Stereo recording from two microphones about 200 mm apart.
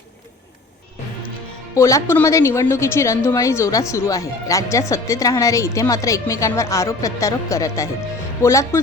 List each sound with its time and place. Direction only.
1.7 s speech: 15° left (ahead or behind)